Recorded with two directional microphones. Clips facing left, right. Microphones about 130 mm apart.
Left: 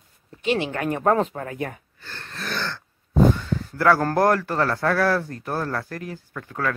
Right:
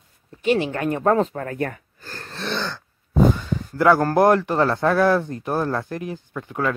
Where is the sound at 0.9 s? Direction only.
30° left (ahead or behind).